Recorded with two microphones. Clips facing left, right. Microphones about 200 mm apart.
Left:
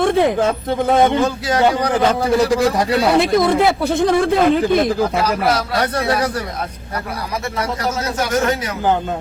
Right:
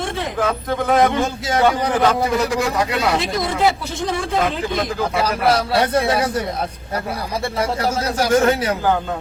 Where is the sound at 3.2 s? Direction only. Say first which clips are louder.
Left 7 dB; 55° left (ahead or behind).